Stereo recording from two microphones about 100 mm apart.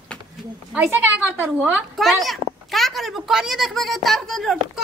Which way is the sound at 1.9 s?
Centre (ahead or behind).